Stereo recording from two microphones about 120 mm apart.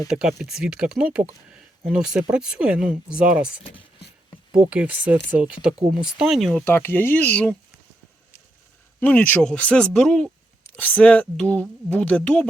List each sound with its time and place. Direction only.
0.1 s speech: 5° right (ahead or behind)
1.5 s a sound: 10° right (ahead or behind)
2.3 s speech: 10° right (ahead or behind)
6.7 s a woman's voice: 20° left (ahead or behind)
9.0 s a woman's voice: 15° left (ahead or behind)